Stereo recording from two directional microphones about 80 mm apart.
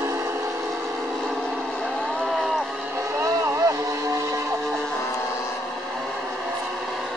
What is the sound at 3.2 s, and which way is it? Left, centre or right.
Vehicle, right.